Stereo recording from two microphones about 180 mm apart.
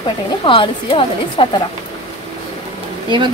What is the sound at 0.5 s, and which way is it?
Speech, 30° left (ahead or behind).